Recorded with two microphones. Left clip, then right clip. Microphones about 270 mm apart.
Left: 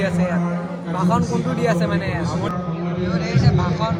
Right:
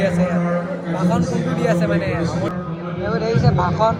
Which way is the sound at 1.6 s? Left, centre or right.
Left.